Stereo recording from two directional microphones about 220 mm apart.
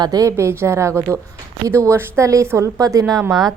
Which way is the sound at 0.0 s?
15° right (ahead or behind).